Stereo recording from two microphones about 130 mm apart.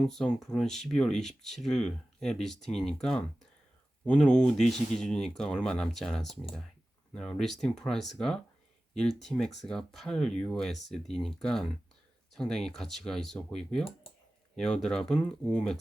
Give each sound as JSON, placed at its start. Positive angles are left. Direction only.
{"t": 0.0, "sound": "speech", "side_deg": 5}